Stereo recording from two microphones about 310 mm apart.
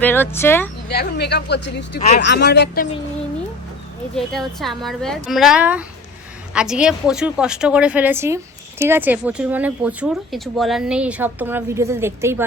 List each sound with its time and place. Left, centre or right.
0.0 s speech: centre
0.9 s speech: left
4.1 s speech: centre